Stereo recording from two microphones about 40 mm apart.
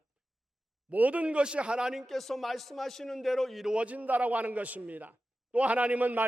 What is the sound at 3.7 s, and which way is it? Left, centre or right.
A man's voice, right.